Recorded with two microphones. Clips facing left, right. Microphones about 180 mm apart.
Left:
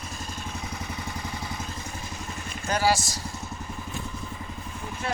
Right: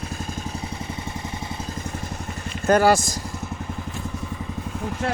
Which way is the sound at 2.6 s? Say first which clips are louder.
Right 8 dB; 55° right (ahead or behind).